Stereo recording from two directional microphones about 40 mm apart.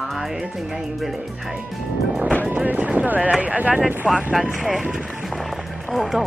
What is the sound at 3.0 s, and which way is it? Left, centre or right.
Speech, right.